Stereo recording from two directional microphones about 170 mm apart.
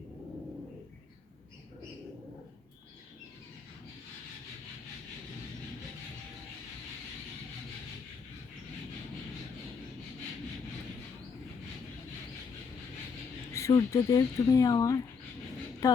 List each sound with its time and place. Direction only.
13.5 s speech: 20° left (ahead or behind)